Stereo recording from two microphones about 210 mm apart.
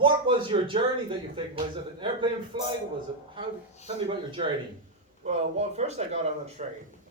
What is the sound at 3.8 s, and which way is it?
A man's voice, 25° right (ahead or behind).